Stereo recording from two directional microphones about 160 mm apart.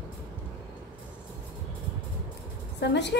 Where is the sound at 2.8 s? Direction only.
90° left.